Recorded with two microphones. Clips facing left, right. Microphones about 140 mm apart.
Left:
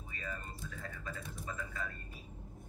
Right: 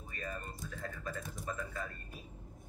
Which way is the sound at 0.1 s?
45° right (ahead or behind).